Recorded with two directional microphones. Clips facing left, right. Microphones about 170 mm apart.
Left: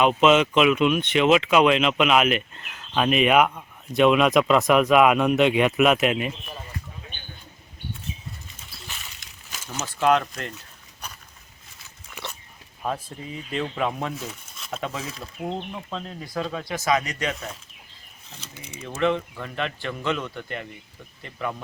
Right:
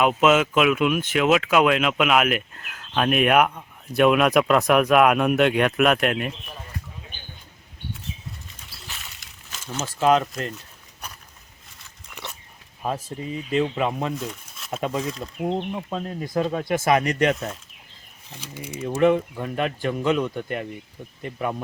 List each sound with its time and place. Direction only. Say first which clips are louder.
0.0 s speech: left 1 dB; 5° right (ahead or behind)
8.9 s a sound: right 1 dB; centre (ahead or behind)
10.0 s speech: right 2 dB; centre (ahead or behind)
11.8 s dog: left 1 dB; centre (ahead or behind)
12.8 s speech: right 2 dB; 5° right (ahead or behind)
16.5 s speech: right 3 dB; 50° right (ahead or behind)
18.3 s speech: right 7 dB; 10° right (ahead or behind)